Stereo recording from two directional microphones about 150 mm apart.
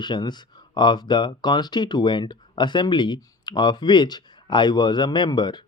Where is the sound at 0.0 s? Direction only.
30° left (ahead or behind).